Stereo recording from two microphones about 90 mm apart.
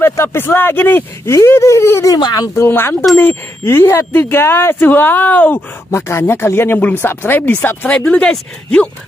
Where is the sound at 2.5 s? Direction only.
25° left (ahead or behind).